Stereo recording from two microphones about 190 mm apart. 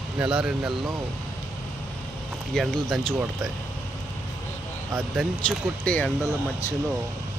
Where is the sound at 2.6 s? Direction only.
Centre (ahead or behind).